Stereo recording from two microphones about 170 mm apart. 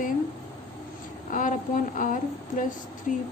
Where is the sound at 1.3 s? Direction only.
50° left (ahead or behind).